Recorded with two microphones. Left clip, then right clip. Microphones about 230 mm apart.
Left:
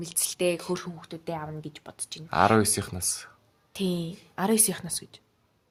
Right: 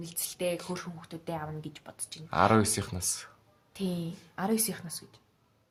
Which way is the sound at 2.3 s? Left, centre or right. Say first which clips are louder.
Left 3 dB; centre.